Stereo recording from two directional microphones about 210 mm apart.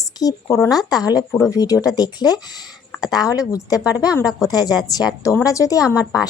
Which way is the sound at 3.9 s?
5° right (ahead or behind).